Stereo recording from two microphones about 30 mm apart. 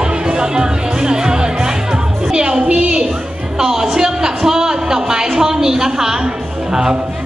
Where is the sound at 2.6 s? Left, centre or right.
Right.